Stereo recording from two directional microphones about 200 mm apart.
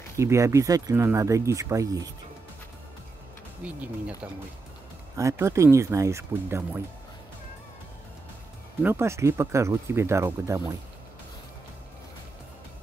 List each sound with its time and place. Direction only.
0.2 s speech: 15° right (ahead or behind)
3.6 s speech: 5° right (ahead or behind)
8.8 s speech: 15° right (ahead or behind)